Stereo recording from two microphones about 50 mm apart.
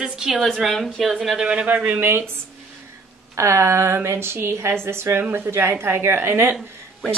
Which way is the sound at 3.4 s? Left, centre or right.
Right.